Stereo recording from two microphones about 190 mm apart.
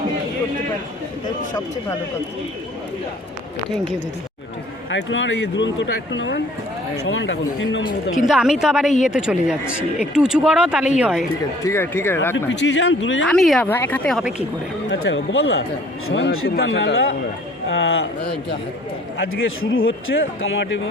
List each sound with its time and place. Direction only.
4.9 s speech: 75° left (ahead or behind)
8.3 s speech: 5° right (ahead or behind)
11.6 s speech: 15° left (ahead or behind)
12.5 s speech: 75° left (ahead or behind)
13.2 s speech: centre (ahead or behind)
14.8 s speech: 85° left; by 18.5 s 65° left (ahead or behind)
19.7 s speech: 90° left